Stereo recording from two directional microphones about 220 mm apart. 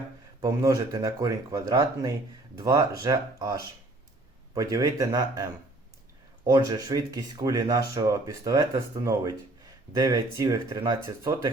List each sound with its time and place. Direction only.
0.4 s speech: 15° right (ahead or behind)